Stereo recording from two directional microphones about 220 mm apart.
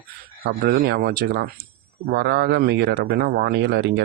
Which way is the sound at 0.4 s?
40° right (ahead or behind).